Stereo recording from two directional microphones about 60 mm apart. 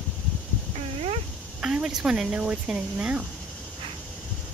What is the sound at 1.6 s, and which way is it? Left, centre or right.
Speech, centre.